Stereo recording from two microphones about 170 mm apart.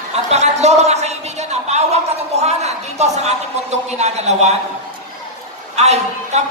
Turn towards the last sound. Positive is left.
turn(degrees=-40)  # may be behind; listen again after turning